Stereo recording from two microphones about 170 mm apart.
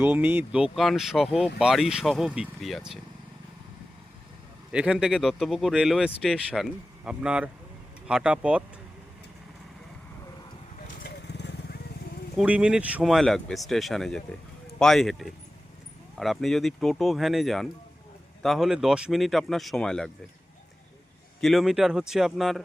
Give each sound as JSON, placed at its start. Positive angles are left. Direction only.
{"t": 0.0, "sound": "speech", "side_deg": -10}
{"t": 4.7, "sound": "speech", "side_deg": -5}
{"t": 11.0, "sound": "vehicle", "side_deg": 85}
{"t": 12.4, "sound": "speech", "side_deg": -5}
{"t": 21.4, "sound": "speech", "side_deg": 0}